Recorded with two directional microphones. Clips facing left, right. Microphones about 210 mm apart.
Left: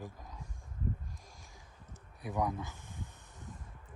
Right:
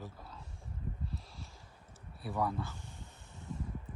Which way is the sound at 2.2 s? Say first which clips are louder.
Even; 15° left (ahead or behind).